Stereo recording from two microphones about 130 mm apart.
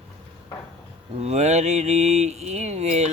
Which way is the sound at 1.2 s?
60° right (ahead or behind).